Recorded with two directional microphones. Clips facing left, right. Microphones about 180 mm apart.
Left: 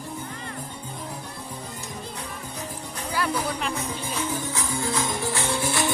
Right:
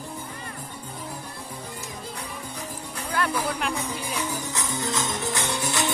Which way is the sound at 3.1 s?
10° left (ahead or behind).